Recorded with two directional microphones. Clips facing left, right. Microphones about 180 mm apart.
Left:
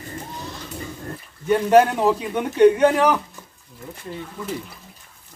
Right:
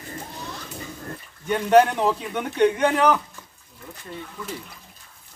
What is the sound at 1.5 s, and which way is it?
A man's voice, 5° left (ahead or behind).